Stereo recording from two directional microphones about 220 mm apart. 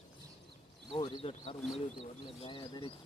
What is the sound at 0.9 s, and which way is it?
Speech, 20° left (ahead or behind).